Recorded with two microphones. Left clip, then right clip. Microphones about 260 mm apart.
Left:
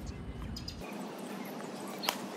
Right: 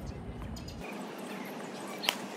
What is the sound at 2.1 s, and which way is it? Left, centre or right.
Clip-clop, centre.